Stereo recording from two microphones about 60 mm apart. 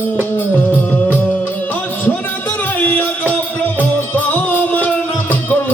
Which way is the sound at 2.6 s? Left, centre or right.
Left.